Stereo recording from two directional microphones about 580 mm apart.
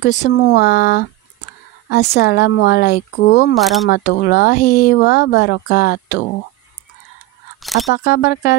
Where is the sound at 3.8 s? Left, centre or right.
Centre.